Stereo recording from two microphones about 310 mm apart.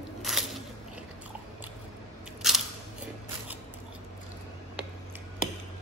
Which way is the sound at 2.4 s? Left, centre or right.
Centre.